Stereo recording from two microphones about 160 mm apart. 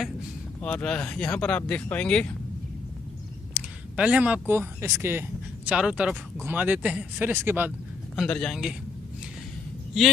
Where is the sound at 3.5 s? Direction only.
5° right (ahead or behind).